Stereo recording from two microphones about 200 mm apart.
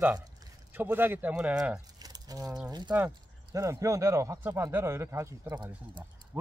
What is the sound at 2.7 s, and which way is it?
Speech, 20° right (ahead or behind).